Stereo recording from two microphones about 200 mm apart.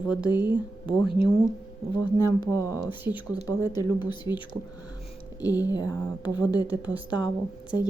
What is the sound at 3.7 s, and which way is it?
Speech, 20° left (ahead or behind).